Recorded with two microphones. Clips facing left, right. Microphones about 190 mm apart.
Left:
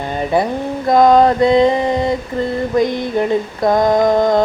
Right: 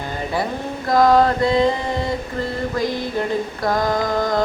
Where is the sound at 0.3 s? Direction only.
20° left (ahead or behind).